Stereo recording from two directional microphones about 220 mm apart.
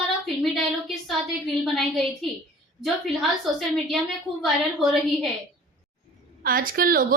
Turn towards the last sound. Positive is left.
turn(degrees=-40)  # may be behind; listen again after turning